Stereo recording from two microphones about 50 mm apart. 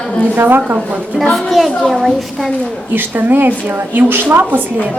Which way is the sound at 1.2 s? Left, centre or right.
Centre.